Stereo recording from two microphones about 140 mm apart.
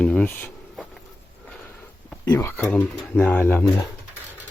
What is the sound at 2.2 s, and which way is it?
Speech, 20° left (ahead or behind).